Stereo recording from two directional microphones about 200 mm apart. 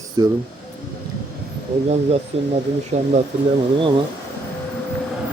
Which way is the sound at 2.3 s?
30° right (ahead or behind).